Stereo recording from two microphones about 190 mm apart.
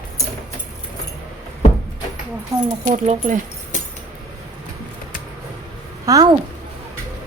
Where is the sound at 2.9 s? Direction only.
40° right (ahead or behind).